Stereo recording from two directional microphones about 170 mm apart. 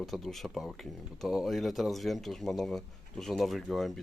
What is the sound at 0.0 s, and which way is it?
Speech, centre (ahead or behind).